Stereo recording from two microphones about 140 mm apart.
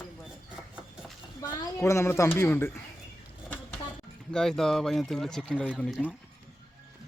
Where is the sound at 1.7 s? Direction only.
20° left (ahead or behind).